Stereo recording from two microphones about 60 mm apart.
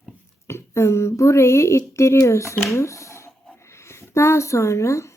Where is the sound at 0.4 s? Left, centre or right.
Left.